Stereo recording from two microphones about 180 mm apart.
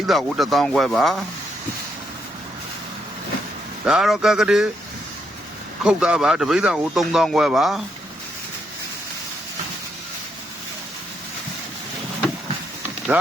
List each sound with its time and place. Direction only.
0.1 s speech: centre (ahead or behind)
3.8 s speech: centre (ahead or behind)
5.8 s speech: 5° right (ahead or behind)